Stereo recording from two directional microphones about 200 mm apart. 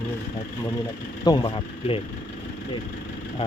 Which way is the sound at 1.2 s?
25° left (ahead or behind).